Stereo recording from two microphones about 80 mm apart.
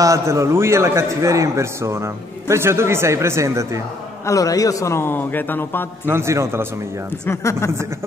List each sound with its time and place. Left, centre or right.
0.0 s a man's voice: right
4.3 s a man's voice: left
6.0 s a man's voice: right
7.2 s a man's voice: left